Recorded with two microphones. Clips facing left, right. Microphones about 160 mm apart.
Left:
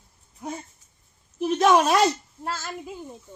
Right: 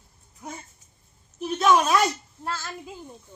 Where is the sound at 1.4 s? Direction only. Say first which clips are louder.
Left 2 dB; 40° left (ahead or behind).